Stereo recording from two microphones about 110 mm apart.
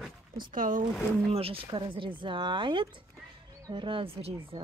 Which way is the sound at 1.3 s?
60° right (ahead or behind).